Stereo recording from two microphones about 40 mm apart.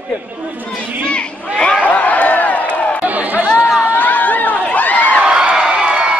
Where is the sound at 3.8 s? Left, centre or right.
Left.